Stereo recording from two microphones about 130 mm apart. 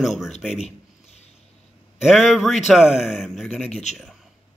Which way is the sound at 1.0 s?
55° left (ahead or behind).